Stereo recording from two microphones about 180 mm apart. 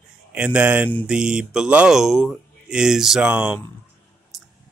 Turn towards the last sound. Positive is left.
turn(degrees=-5)  # may be behind; listen again after turning